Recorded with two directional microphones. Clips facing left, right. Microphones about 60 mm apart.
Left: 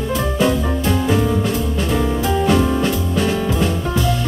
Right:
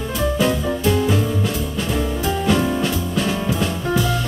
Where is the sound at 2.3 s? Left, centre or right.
Centre.